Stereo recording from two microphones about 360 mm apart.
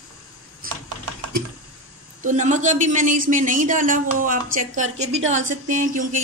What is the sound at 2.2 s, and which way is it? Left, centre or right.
A man's voice, centre.